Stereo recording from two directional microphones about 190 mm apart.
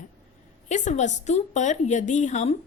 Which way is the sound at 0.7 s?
40° left (ahead or behind).